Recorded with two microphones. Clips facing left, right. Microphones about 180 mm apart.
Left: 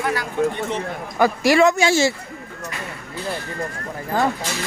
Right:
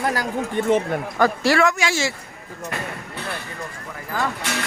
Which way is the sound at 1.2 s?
15° left (ahead or behind).